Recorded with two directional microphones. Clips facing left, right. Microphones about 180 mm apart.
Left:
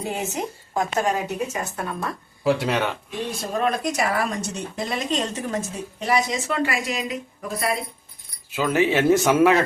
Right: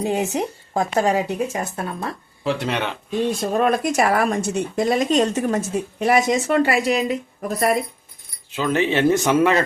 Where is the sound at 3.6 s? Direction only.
50° right (ahead or behind).